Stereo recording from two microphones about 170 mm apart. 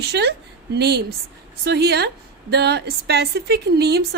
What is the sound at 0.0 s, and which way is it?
A woman's voice, 80° right.